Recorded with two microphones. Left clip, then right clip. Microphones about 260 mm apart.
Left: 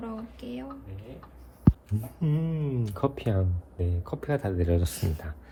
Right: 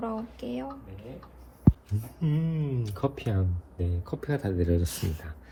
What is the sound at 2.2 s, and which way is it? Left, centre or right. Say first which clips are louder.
Speech: even; left.